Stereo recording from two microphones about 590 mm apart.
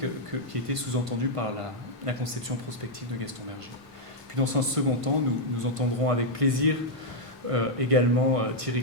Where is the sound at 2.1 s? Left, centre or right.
Right.